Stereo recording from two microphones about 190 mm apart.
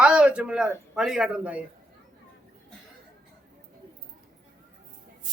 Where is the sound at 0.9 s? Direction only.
5° right (ahead or behind).